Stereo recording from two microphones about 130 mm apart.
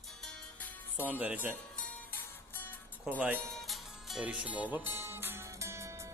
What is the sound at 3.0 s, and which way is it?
Speech, 10° right (ahead or behind).